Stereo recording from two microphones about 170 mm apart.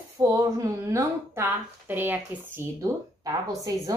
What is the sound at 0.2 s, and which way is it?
A woman's voice, 20° right (ahead or behind).